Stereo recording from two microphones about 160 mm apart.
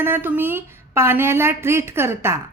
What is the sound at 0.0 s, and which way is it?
A woman's voice, 15° right (ahead or behind).